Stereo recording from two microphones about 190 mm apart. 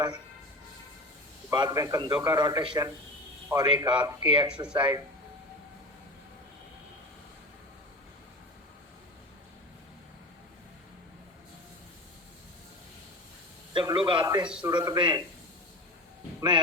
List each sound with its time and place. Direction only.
1.5 s speech: 20° right (ahead or behind)
13.7 s a man's voice: 25° right (ahead or behind)
14.4 s a man's voice: 5° right (ahead or behind)
14.7 s speech: 25° right (ahead or behind)